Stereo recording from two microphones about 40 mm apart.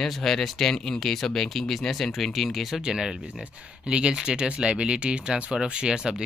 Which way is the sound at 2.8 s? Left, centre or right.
Centre.